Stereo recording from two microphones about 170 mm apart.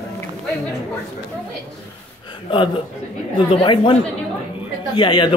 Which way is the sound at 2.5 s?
30° left (ahead or behind).